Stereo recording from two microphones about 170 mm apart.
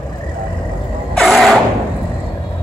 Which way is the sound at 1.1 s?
Centre (ahead or behind).